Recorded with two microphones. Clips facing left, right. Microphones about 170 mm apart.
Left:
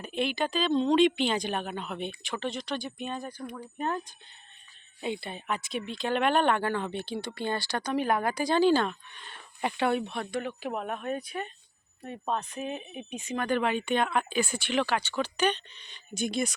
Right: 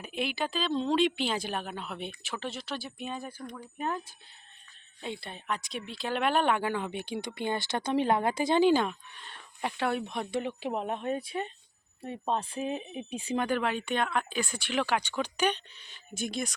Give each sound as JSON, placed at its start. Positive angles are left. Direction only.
{"t": 0.0, "sound": "speech", "side_deg": -5}
{"t": 3.3, "sound": "speech", "side_deg": 10}
{"t": 3.8, "sound": "speech", "side_deg": -5}
{"t": 9.1, "sound": "speech", "side_deg": 0}
{"t": 10.1, "sound": "speech", "side_deg": -20}
{"t": 13.5, "sound": "speech", "side_deg": 0}
{"t": 14.8, "sound": "speech", "side_deg": -15}